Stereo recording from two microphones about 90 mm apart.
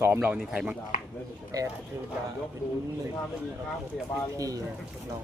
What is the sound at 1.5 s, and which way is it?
Speech, 40° right (ahead or behind).